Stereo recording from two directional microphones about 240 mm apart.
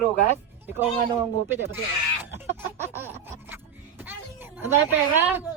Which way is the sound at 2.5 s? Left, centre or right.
Centre.